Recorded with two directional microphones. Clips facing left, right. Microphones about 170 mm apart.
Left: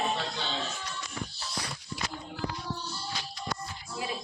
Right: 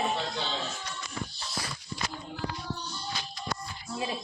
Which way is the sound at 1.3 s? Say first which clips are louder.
Even; 5° left (ahead or behind).